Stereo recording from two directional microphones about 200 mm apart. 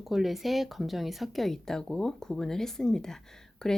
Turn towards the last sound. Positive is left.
turn(degrees=0)  # may be behind; listen again after turning